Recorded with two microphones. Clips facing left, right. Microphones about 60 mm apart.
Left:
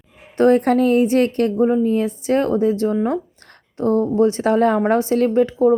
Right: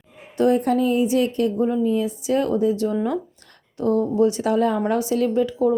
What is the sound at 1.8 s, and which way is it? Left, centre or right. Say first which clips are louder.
A woman's voice: left 3 dB; left.